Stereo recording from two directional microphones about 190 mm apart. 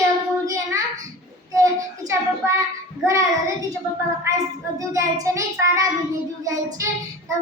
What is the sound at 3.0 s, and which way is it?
Child singing, 15° right (ahead or behind).